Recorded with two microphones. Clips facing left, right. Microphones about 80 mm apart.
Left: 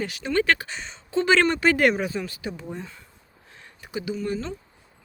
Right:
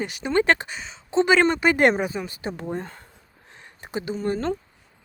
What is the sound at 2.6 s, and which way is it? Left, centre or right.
Speech, right.